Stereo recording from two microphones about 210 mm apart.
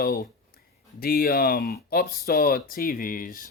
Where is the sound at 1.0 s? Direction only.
45° left (ahead or behind).